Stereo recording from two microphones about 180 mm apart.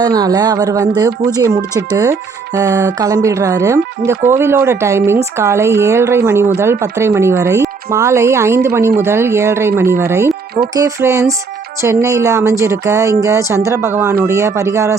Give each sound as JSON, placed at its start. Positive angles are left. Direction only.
{"t": 0.0, "sound": "speech", "side_deg": -20}